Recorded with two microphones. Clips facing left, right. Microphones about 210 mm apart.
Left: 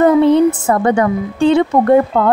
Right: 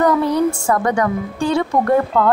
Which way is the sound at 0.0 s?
25° left (ahead or behind).